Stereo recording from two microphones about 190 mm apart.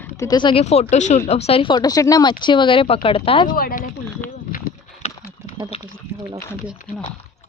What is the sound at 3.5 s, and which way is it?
Speech, 50° left (ahead or behind).